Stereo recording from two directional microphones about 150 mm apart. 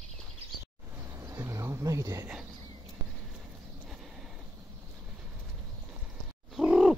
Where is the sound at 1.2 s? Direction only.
20° right (ahead or behind).